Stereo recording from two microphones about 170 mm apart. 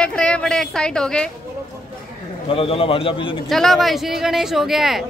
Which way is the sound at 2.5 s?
35° left (ahead or behind).